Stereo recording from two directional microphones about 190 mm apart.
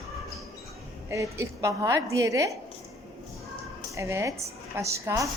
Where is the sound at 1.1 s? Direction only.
15° right (ahead or behind).